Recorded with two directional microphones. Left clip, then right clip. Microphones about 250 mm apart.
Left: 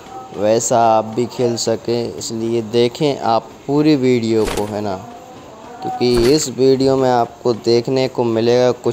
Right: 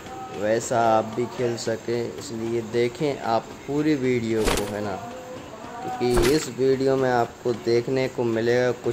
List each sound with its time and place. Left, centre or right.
0.4 s speech: centre
4.4 s speech: centre
6.1 s speech: centre
6.6 s speech: centre